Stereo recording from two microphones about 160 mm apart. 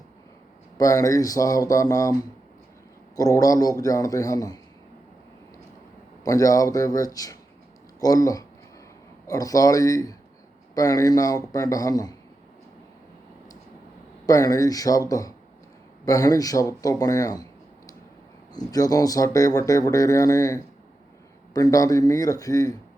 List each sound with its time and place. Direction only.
0.8 s speech: 20° left (ahead or behind)
3.2 s speech: 20° left (ahead or behind)
6.2 s speech: 20° left (ahead or behind)
14.3 s speech: 20° left (ahead or behind)
16.0 s speech: 20° left (ahead or behind)